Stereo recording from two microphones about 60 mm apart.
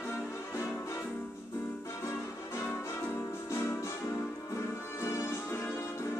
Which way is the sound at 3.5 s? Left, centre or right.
Left.